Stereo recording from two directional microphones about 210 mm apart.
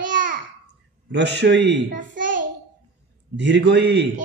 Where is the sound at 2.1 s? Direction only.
40° right (ahead or behind).